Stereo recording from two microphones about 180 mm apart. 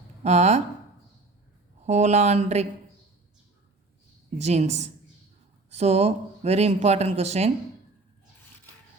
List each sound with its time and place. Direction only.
0.2 s speech: 40° right (ahead or behind)
1.8 s speech: 40° right (ahead or behind)
4.4 s speech: 40° right (ahead or behind)